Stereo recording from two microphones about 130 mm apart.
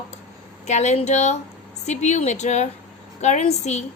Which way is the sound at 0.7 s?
60° left (ahead or behind).